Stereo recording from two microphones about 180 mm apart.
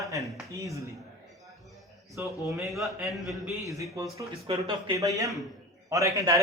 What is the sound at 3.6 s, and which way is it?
A man's voice, 15° right (ahead or behind).